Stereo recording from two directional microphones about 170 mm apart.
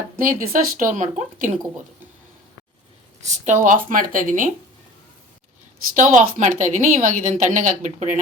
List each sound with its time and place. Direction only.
0.2 s a woman's voice: 55° right (ahead or behind)
3.2 s a woman's voice: 45° right (ahead or behind)
6.0 s a woman's voice: 45° right (ahead or behind)